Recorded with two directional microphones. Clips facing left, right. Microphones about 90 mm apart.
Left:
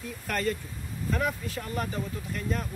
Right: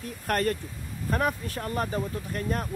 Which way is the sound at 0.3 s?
55° right (ahead or behind).